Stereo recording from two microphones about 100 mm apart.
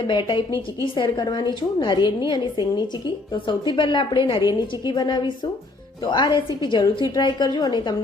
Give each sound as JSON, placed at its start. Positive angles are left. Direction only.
{"t": 0.0, "sound": "a woman's voice", "side_deg": 50}